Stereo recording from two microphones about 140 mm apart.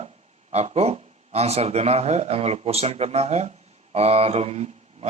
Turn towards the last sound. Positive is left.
turn(degrees=-50)  # may be behind; listen again after turning